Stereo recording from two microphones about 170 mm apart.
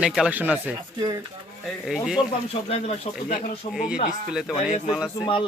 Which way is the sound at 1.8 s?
Centre (ahead or behind).